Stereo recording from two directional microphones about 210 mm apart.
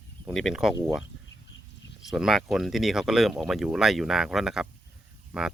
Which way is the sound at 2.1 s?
Centre (ahead or behind).